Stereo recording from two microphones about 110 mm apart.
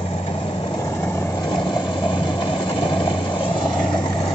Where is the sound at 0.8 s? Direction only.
25° left (ahead or behind).